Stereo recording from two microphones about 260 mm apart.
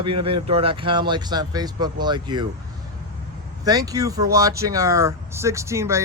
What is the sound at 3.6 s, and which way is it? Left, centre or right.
Speech, centre.